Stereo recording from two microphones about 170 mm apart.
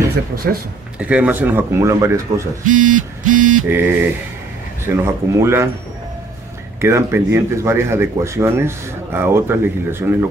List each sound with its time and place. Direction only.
0.9 s speech: 10° right (ahead or behind)
2.6 s speech: 50° right (ahead or behind)
3.6 s speech: 10° right (ahead or behind)
6.8 s speech: 15° right (ahead or behind)